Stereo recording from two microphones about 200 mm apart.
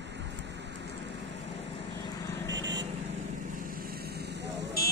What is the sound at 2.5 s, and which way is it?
Vehicle, 65° right (ahead or behind).